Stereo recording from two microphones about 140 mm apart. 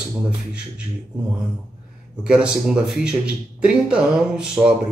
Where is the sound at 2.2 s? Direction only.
5° right (ahead or behind).